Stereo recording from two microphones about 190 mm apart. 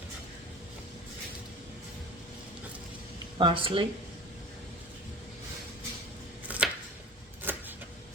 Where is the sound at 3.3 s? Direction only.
25° right (ahead or behind).